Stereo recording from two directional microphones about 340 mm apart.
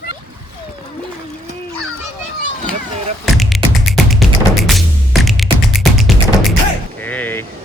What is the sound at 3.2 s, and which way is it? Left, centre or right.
Music, centre.